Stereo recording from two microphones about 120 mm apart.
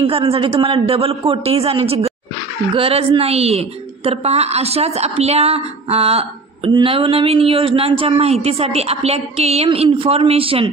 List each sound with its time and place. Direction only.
0.0 s a woman's voice: 50° right (ahead or behind)